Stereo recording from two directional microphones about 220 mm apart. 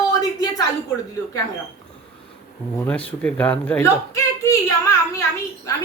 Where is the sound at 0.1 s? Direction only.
15° left (ahead or behind).